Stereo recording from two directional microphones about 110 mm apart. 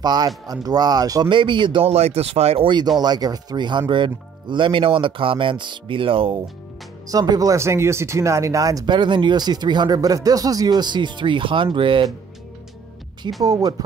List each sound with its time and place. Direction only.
0.0 s speech: 40° right (ahead or behind)
1.3 s speech: 45° right (ahead or behind)
1.9 s speech: 70° right (ahead or behind); by 6.4 s 55° right (ahead or behind)
7.1 s speech: 35° right (ahead or behind); by 12.1 s 50° right (ahead or behind)
13.4 s speech: 35° right (ahead or behind)